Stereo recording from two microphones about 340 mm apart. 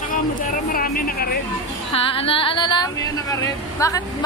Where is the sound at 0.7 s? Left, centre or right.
Left.